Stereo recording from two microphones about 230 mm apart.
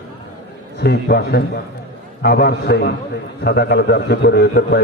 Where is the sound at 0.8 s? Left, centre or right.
Left.